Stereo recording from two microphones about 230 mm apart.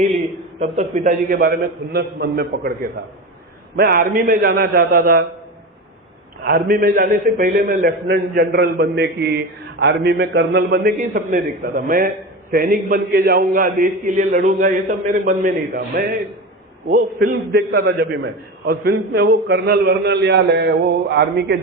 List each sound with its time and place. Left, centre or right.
0.6 s a man's voice: right
3.8 s a man's voice: right
6.4 s a man's voice: right